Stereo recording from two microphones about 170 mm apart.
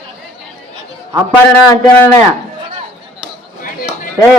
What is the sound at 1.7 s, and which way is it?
Speech, 15° left (ahead or behind).